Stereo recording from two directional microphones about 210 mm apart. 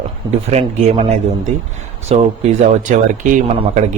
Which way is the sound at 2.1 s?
30° right (ahead or behind).